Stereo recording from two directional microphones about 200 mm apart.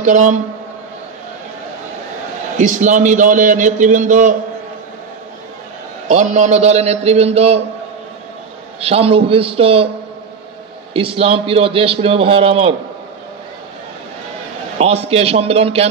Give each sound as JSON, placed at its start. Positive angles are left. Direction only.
{"t": 0.0, "sound": "a man's voice", "side_deg": -35}
{"t": 2.5, "sound": "a man's voice", "side_deg": -35}
{"t": 6.0, "sound": "a man's voice", "side_deg": -35}
{"t": 8.8, "sound": "a man's voice", "side_deg": -30}
{"t": 10.9, "sound": "a man's voice", "side_deg": -25}
{"t": 14.8, "sound": "a man's voice", "side_deg": -30}